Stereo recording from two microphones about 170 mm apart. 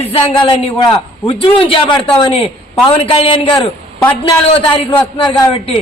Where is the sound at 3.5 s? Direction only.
15° left (ahead or behind).